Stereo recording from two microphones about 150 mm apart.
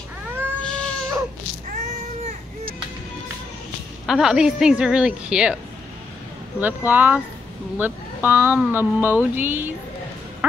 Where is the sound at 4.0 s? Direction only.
5° right (ahead or behind).